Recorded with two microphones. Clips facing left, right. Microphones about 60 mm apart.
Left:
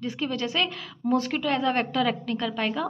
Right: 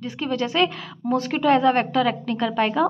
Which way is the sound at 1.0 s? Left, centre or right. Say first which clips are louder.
Right 1 dB; centre.